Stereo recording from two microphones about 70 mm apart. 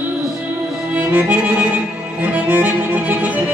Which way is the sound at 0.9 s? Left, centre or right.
Centre.